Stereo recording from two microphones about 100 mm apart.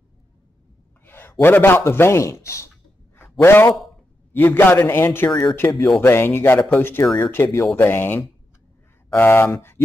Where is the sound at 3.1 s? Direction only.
25° left (ahead or behind).